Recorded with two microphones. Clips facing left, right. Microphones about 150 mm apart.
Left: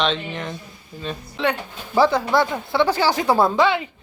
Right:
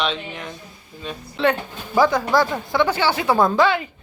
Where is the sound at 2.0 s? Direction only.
25° left (ahead or behind).